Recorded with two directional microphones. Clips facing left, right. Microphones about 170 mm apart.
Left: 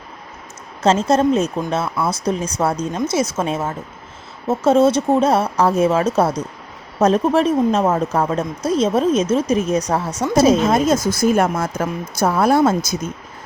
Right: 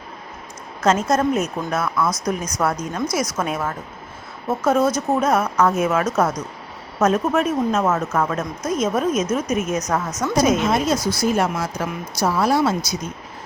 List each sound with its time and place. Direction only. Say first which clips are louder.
0.8 s a woman's voice: left 3 dB; 30° left (ahead or behind)
10.7 s a woman's voice: left 4 dB; 50° left (ahead or behind)